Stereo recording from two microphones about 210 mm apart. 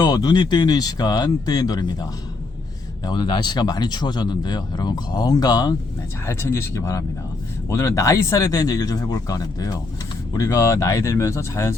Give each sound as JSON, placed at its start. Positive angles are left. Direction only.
{"t": 0.0, "sound": "speech", "side_deg": 20}